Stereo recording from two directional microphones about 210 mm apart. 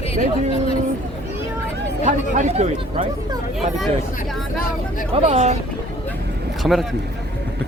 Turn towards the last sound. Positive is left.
turn(degrees=0)  # may be behind; listen again after turning